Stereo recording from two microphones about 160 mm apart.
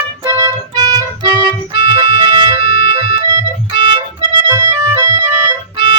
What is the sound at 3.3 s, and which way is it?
Organ, 30° right (ahead or behind).